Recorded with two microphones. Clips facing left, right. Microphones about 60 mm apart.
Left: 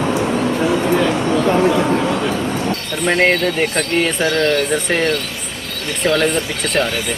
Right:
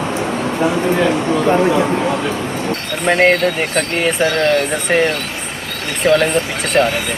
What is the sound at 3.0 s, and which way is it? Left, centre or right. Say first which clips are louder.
Speech: right 2 dB; centre.